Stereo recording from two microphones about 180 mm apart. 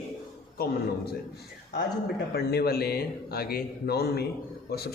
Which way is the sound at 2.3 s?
60° left (ahead or behind).